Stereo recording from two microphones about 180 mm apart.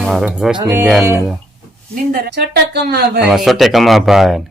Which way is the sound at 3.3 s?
Centre (ahead or behind).